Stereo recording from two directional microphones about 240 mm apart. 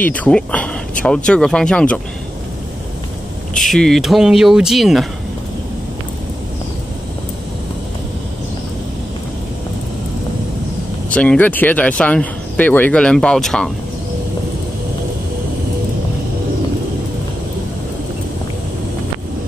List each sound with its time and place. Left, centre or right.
0.0 s speech: centre
3.5 s speech: centre
11.1 s speech: centre